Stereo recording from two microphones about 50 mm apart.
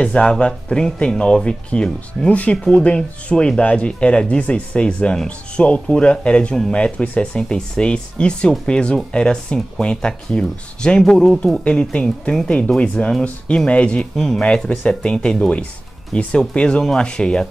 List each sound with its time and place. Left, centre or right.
0.0 s speech: centre